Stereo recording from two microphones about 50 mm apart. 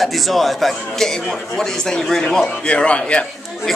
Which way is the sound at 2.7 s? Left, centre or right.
Left.